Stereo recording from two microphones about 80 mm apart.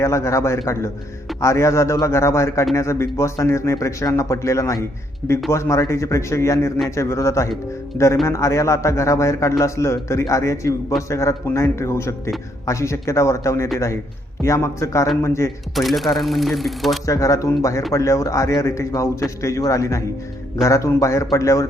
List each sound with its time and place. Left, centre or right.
0.0 s a man's voice: left
7.9 s speech: left
8.3 s a man's voice: left
15.7 s speech: centre
17.1 s a man's voice: left